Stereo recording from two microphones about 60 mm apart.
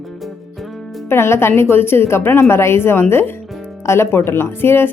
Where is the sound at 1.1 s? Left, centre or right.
Left.